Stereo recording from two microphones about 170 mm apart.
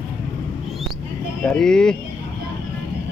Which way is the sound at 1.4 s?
5° left (ahead or behind).